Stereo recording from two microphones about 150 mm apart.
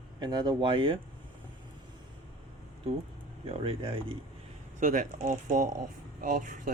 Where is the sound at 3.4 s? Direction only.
40° right (ahead or behind).